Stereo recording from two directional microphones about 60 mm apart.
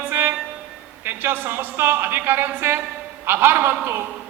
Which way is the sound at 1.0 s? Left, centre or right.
Right.